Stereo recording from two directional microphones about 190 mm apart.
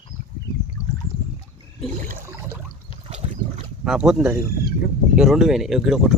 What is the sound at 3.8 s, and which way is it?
Speech, 5° right (ahead or behind).